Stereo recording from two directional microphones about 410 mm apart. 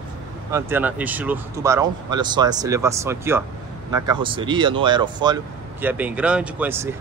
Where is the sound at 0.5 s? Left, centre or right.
Centre.